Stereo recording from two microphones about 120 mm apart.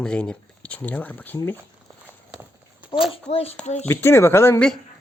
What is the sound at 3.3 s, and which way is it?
Speech, 55° left (ahead or behind).